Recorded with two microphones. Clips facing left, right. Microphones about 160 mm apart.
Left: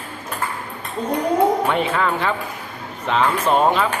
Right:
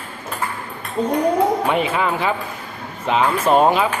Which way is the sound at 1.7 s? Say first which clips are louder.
Right 1 dB; 5° right (ahead or behind).